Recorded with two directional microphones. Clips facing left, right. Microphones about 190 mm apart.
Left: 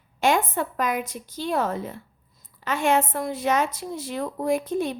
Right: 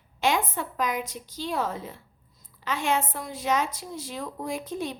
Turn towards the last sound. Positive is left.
turn(degrees=55)  # may be behind; listen again after turning